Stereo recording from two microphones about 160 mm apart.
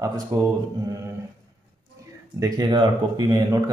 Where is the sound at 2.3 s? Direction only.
25° right (ahead or behind).